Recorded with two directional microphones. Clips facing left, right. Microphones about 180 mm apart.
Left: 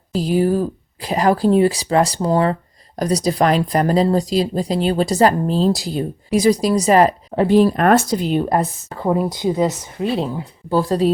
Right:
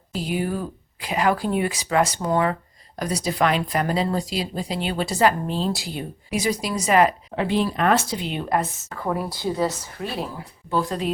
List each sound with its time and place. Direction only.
0.1 s speech: 35° left (ahead or behind); by 10.4 s 20° left (ahead or behind)
10.7 s speech: 35° left (ahead or behind)